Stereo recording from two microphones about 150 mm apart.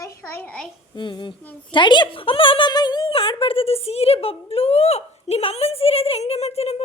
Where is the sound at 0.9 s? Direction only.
30° left (ahead or behind).